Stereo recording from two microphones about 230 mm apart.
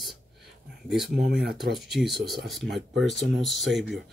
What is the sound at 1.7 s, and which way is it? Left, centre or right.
Speech, centre.